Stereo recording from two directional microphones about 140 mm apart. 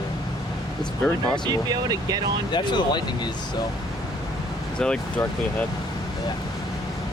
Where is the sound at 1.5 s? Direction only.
30° right (ahead or behind).